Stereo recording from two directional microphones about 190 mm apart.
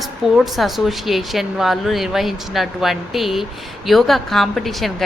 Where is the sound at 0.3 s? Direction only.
Centre (ahead or behind).